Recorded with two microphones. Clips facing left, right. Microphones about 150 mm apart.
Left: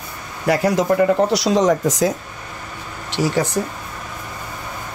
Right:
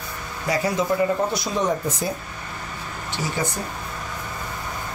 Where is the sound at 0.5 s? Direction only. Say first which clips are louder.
Left 6 dB; 65° left (ahead or behind); by 2.1 s 90° left.